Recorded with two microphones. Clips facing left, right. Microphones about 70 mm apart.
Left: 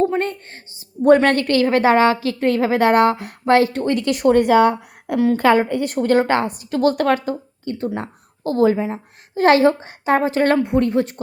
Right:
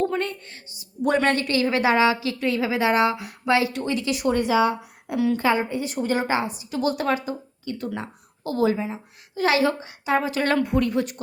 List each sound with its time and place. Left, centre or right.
0.2 s a woman's voice: left